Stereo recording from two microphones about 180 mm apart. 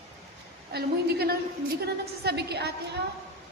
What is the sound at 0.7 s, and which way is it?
A woman's voice, 60° right (ahead or behind).